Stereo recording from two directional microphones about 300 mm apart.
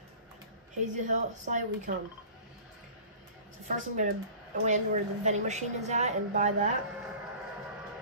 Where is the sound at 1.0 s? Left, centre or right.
Right.